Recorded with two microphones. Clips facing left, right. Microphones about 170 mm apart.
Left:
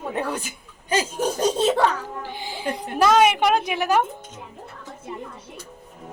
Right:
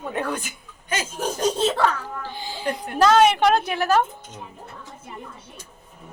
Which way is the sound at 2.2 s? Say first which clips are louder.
Right 2 dB; 20° left (ahead or behind).